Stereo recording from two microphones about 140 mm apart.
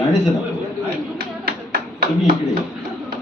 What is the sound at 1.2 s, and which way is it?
Tap, 90° right.